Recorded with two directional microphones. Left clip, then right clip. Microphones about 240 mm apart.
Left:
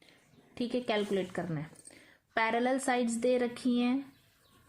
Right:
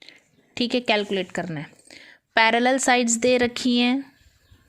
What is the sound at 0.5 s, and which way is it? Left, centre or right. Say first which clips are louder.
A woman's voice: right 10 dB; right.